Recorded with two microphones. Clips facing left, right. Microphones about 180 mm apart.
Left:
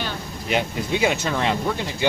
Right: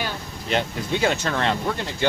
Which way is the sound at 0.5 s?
10° left (ahead or behind).